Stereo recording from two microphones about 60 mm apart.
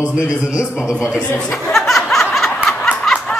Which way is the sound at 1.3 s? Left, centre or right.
Centre.